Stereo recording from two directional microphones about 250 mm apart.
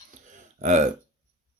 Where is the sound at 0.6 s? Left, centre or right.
Right.